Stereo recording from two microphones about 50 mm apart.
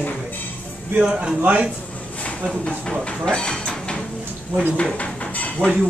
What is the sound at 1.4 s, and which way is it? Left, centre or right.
Speech, right.